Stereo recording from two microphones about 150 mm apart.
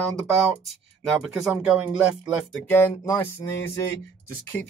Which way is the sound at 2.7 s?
15° left (ahead or behind).